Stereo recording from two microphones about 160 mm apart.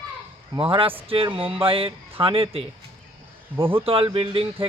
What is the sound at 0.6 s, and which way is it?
Speech, 35° right (ahead or behind).